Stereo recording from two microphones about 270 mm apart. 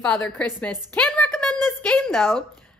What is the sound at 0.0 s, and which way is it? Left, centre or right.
Speech, centre.